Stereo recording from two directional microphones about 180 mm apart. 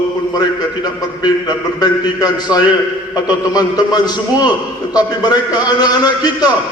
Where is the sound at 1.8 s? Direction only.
20° left (ahead or behind).